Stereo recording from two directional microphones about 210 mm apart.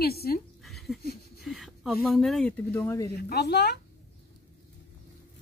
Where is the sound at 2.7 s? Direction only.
15° left (ahead or behind).